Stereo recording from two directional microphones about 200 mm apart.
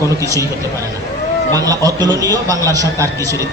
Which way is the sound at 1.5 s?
20° right (ahead or behind).